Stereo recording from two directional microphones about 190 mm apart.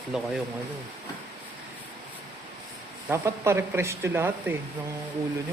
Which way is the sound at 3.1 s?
15° right (ahead or behind).